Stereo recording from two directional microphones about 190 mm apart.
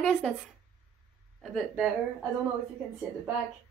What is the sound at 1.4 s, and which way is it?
Speech, centre (ahead or behind).